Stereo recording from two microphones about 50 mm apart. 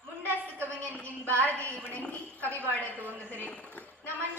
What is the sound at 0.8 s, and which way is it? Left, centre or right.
Speech, left.